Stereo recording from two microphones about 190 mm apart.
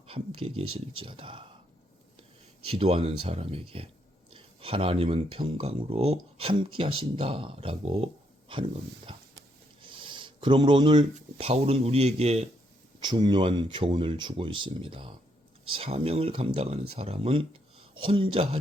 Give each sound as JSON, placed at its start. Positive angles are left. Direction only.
{"t": 0.1, "sound": "speech", "side_deg": -30}
{"t": 2.6, "sound": "speech", "side_deg": -30}
{"t": 9.8, "sound": "writing", "side_deg": -25}
{"t": 11.1, "sound": "speech", "side_deg": -30}
{"t": 13.0, "sound": "speech", "side_deg": -20}